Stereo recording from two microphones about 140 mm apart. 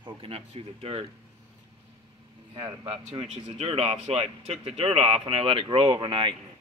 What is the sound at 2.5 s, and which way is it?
Speech, 40° right (ahead or behind).